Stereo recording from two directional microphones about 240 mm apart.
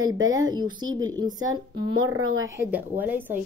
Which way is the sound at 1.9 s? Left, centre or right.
Right.